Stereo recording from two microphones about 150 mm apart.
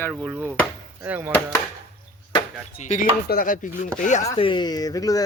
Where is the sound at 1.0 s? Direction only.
10° right (ahead or behind).